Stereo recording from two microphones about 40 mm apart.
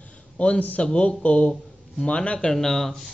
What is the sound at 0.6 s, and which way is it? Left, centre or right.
Speech, left.